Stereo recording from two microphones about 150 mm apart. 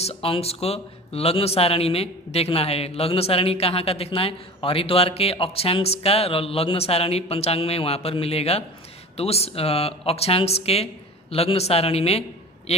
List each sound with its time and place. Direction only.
0.0 s a man's voice: 40° left (ahead or behind)